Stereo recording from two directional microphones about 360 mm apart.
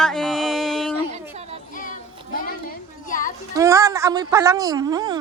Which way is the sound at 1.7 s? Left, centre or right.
Left.